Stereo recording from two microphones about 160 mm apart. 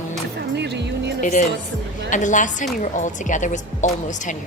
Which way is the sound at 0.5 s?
90° right.